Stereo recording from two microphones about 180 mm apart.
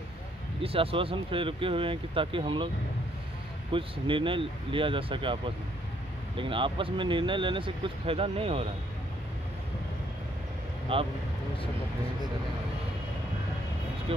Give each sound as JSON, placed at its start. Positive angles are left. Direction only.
{"t": 0.6, "sound": "speech", "side_deg": -30}
{"t": 3.7, "sound": "speech", "side_deg": -30}
{"t": 10.9, "sound": "speech", "side_deg": -30}